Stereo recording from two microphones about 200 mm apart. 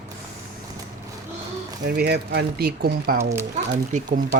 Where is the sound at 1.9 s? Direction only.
50° right (ahead or behind).